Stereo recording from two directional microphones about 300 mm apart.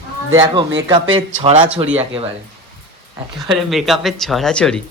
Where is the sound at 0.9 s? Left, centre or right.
Centre.